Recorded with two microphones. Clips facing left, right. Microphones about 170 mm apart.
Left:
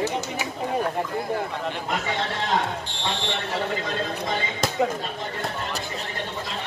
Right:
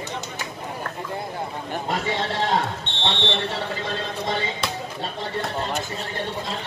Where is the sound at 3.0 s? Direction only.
25° right (ahead or behind).